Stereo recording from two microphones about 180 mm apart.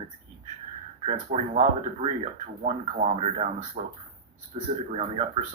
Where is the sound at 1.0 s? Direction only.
35° right (ahead or behind).